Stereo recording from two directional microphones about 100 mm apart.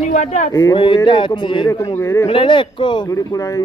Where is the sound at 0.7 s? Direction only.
55° left (ahead or behind).